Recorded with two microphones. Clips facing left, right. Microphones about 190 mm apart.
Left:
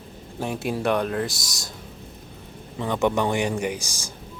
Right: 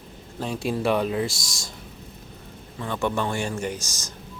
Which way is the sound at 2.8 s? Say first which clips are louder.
Left 4 dB; 20° left (ahead or behind).